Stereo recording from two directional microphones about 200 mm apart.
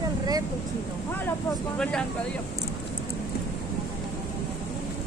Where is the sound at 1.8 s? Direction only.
5° left (ahead or behind).